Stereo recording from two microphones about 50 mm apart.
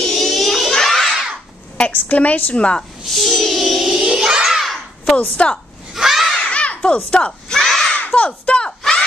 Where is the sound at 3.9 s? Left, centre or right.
Centre.